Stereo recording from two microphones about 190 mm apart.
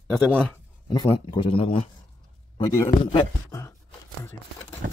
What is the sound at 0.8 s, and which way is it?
Speech, 25° left (ahead or behind).